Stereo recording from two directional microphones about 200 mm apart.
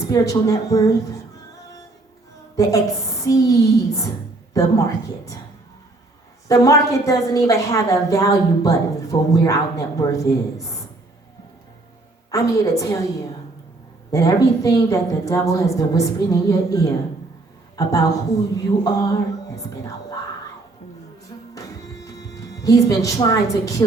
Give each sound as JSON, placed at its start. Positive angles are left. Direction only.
{"t": 0.1, "sound": "a woman's voice", "side_deg": 15}
{"t": 2.6, "sound": "a woman's voice", "side_deg": 15}
{"t": 6.5, "sound": "a woman's voice", "side_deg": 15}
{"t": 12.3, "sound": "a woman's voice", "side_deg": 15}
{"t": 21.5, "sound": "music", "side_deg": 15}